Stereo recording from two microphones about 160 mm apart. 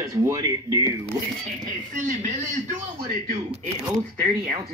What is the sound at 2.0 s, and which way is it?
Speech, 50° right (ahead or behind).